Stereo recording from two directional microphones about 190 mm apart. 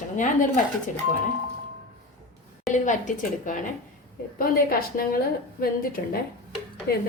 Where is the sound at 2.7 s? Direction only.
40° left (ahead or behind).